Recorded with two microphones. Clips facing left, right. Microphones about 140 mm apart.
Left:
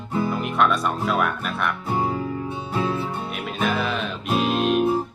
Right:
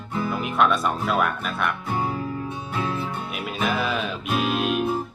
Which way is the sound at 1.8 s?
20° left (ahead or behind).